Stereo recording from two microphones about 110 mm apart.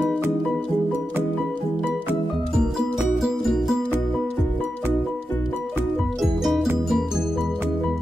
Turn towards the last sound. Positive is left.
turn(degrees=0)  # may be behind; listen again after turning